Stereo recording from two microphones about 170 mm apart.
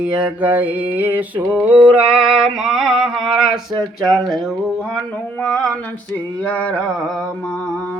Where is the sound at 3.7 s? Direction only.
25° right (ahead or behind).